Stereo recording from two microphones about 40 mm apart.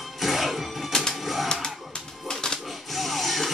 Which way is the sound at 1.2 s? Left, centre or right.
Centre.